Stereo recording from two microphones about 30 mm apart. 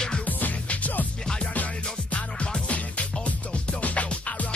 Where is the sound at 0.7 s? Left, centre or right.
Left.